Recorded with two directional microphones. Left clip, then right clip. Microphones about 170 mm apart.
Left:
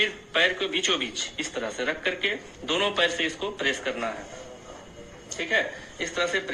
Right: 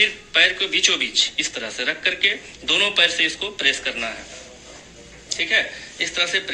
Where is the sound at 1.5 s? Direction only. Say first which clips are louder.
Right 4 dB; 35° right (ahead or behind).